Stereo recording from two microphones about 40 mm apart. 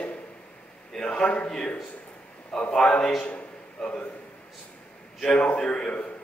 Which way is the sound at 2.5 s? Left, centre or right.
Centre.